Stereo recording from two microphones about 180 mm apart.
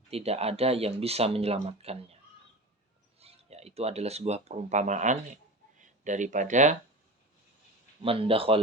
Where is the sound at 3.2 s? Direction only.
35° right (ahead or behind).